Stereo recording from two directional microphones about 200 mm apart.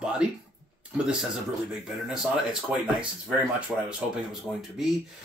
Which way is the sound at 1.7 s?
5° right (ahead or behind).